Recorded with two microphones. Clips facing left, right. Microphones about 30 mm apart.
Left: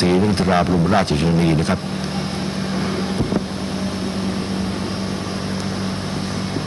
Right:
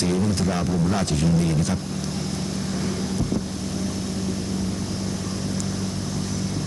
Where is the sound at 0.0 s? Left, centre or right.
Left.